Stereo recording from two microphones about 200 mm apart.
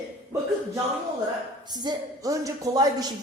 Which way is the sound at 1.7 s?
20° right (ahead or behind).